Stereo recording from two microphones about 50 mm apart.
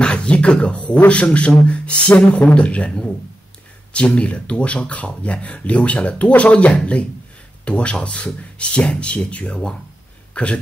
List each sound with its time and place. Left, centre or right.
0.0 s speech: left